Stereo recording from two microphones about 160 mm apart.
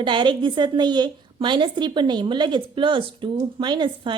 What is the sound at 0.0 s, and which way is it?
A woman's voice, 30° right (ahead or behind).